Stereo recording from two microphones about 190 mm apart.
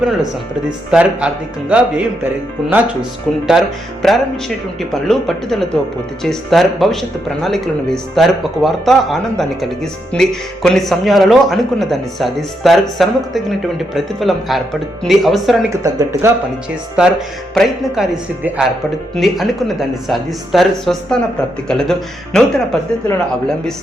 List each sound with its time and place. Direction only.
0.0 s speech: centre (ahead or behind)
15.7 s speech: 15° right (ahead or behind)
17.0 s speech: centre (ahead or behind)